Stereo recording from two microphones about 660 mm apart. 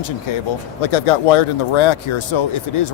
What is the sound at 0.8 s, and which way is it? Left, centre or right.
Speech, left.